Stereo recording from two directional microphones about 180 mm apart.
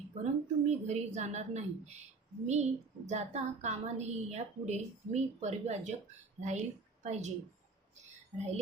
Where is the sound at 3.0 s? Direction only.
40° right (ahead or behind).